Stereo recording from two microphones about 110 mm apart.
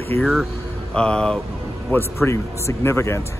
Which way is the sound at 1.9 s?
25° left (ahead or behind).